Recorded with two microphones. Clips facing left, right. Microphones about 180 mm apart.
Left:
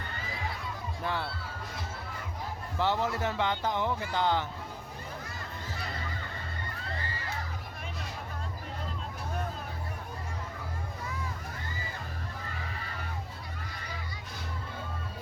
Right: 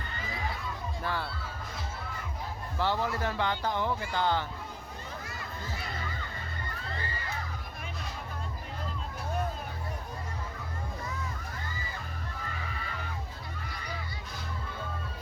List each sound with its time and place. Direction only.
1.0 s speech: 20° left (ahead or behind)
2.7 s speech: 20° left (ahead or behind)